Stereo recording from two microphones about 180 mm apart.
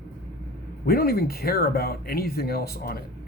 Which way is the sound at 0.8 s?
60° left (ahead or behind).